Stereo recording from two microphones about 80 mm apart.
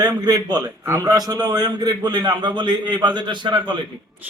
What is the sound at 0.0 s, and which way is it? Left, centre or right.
A man's voice, right.